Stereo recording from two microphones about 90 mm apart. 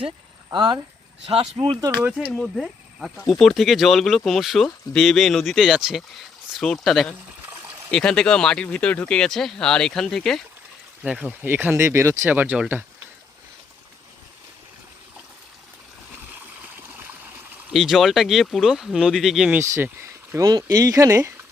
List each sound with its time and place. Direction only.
0.5 s speech: 55° right (ahead or behind)
1.3 s speech: 80° right
2.0 s speech: 10° right (ahead or behind)
11.0 s speech: 10° right (ahead or behind)
11.3 s speech: 20° right (ahead or behind)
12.3 s speech: 20° right (ahead or behind)
17.7 s speech: centre (ahead or behind)
19.5 s speech: 30° right (ahead or behind)